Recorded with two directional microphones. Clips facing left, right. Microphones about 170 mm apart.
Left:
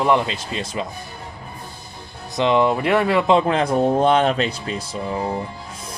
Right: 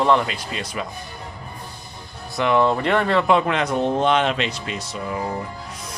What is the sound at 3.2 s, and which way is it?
Speech, 30° left (ahead or behind).